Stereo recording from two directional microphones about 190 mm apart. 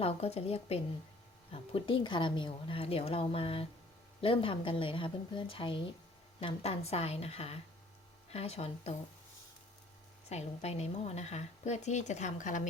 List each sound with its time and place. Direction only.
0.0 s a woman's voice: 35° left (ahead or behind)
10.2 s a woman's voice: 35° left (ahead or behind)